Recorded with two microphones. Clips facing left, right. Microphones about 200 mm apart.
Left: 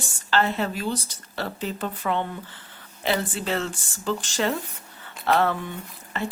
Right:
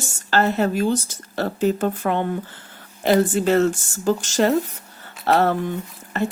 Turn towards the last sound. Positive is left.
turn(degrees=-45)  # may be behind; listen again after turning